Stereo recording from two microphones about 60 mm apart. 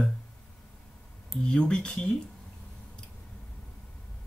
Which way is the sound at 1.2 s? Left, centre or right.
Centre.